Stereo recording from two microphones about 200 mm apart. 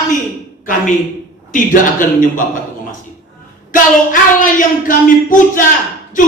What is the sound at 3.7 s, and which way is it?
Speech, 40° left (ahead or behind).